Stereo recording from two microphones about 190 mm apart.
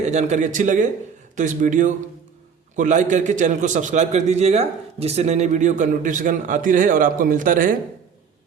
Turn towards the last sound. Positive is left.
turn(degrees=-45)  # may be behind; listen again after turning